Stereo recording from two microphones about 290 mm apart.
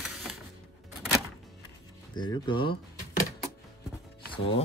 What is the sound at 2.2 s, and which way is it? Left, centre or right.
Speech, centre.